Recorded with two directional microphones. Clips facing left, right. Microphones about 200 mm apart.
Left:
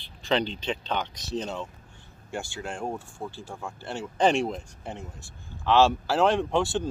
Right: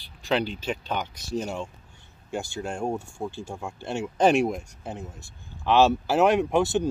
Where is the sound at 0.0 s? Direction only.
10° right (ahead or behind).